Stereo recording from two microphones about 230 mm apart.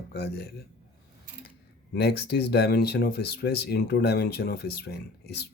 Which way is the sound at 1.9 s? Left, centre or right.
Left.